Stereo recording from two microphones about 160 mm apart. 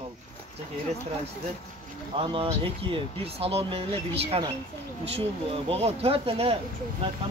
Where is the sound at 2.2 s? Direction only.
35° right (ahead or behind).